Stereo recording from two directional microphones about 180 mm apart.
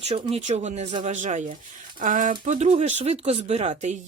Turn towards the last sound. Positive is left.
turn(degrees=-40)  # may be behind; listen again after turning